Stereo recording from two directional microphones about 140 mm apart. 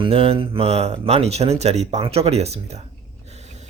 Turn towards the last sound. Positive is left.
turn(degrees=-55)  # may be behind; listen again after turning